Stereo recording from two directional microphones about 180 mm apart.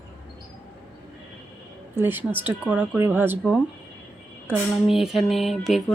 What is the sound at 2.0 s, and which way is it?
Speech, 10° right (ahead or behind).